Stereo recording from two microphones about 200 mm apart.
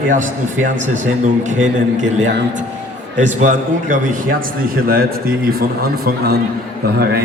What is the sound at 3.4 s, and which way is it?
A man's voice, 40° right (ahead or behind).